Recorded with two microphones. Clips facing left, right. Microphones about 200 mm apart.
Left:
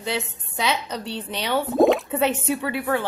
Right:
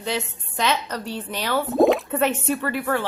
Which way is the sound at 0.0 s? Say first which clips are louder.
Right 1 dB; 10° left (ahead or behind).